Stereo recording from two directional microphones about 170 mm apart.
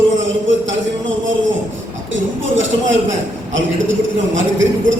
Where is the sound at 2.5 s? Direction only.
90° right.